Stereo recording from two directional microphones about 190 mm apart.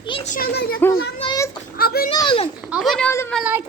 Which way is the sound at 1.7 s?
50° left (ahead or behind).